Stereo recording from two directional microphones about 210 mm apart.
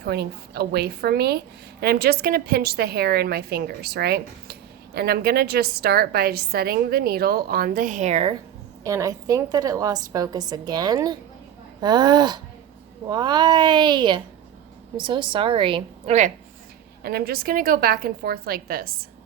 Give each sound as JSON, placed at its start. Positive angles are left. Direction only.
{"t": 0.0, "sound": "a woman's voice", "side_deg": -50}
{"t": 8.8, "sound": "a woman's voice", "side_deg": -15}
{"t": 17.0, "sound": "a woman's voice", "side_deg": -45}